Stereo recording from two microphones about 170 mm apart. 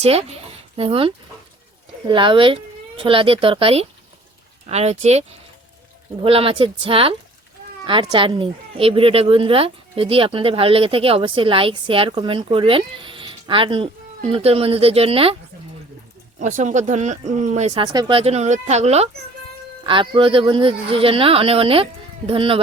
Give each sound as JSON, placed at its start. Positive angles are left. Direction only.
{"t": 0.0, "sound": "speech", "side_deg": -40}
{"t": 6.2, "sound": "speech", "side_deg": -35}
{"t": 16.4, "sound": "speech", "side_deg": -45}
{"t": 17.8, "sound": "speech", "side_deg": -30}
{"t": 19.8, "sound": "speech", "side_deg": -30}